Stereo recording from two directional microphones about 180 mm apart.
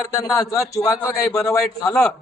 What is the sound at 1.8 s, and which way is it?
Speech, 5° left (ahead or behind).